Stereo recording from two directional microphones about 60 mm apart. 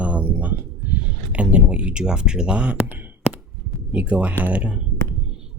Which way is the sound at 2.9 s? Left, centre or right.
Right.